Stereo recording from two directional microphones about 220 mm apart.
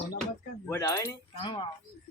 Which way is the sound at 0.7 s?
15° left (ahead or behind).